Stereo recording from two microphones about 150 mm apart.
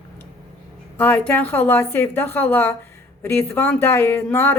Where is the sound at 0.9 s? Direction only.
10° left (ahead or behind).